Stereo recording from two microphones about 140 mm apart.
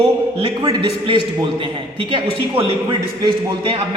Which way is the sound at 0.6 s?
30° right (ahead or behind).